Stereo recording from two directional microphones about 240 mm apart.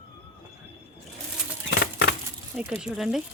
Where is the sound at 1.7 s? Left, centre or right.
Left.